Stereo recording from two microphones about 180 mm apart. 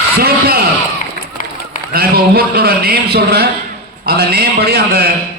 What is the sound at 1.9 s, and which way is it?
A man's voice, 60° right (ahead or behind).